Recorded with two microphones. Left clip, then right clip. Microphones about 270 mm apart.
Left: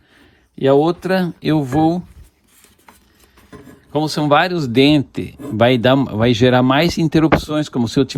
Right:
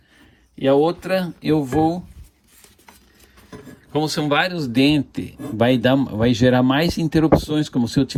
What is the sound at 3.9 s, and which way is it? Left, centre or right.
Speech, centre.